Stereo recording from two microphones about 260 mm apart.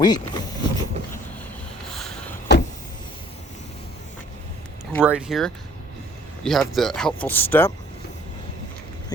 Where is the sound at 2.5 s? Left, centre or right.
Left.